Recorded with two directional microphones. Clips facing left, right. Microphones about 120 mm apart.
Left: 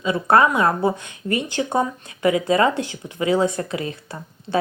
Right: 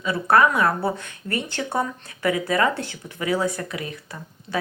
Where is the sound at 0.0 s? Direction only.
20° left (ahead or behind).